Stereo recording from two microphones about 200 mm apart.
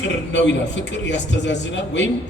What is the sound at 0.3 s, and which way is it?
A man's voice, 60° left (ahead or behind).